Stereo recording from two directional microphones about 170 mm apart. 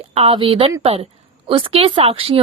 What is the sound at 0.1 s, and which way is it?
A woman's voice, 35° right (ahead or behind).